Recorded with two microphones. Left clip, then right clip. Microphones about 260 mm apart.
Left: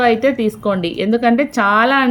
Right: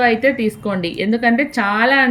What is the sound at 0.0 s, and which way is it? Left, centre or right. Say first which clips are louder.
A woman's voice: left 1 dB; centre.